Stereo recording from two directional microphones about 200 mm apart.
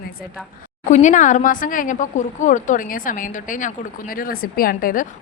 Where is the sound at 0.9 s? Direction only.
40° left (ahead or behind).